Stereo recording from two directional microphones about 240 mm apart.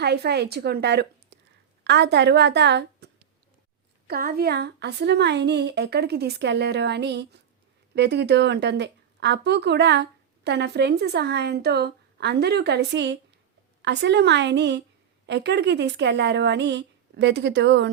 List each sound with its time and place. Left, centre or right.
0.0 s a woman's voice: right